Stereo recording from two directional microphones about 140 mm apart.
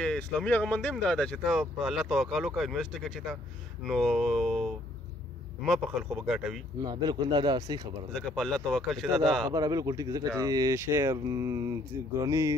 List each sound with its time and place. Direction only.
0.0 s speech: 5° left (ahead or behind)
6.8 s speech: 30° right (ahead or behind)
8.1 s speech: 5° left (ahead or behind)
9.5 s speech: 25° right (ahead or behind)